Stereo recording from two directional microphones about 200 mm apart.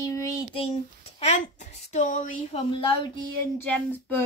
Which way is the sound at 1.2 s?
35° left (ahead or behind).